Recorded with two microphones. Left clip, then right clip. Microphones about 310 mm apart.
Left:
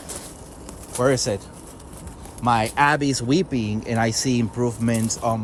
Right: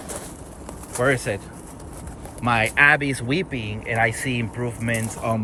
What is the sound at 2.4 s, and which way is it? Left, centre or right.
Speech, centre.